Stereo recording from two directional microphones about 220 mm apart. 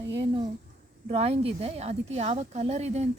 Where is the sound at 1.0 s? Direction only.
30° right (ahead or behind).